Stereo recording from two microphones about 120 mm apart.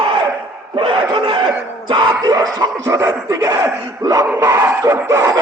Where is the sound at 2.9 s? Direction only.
25° right (ahead or behind).